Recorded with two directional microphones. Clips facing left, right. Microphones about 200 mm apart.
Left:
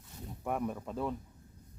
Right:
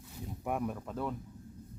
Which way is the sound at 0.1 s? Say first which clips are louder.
Even; centre (ahead or behind).